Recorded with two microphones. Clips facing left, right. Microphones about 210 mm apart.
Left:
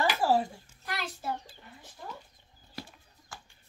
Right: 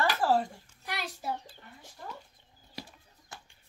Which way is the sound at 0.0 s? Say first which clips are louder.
Left 1 dB; 10° left (ahead or behind).